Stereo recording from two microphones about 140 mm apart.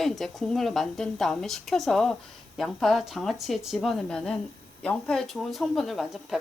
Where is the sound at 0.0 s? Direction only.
Centre (ahead or behind).